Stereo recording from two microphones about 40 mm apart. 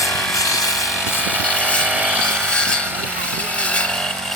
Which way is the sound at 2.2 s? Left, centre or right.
Left.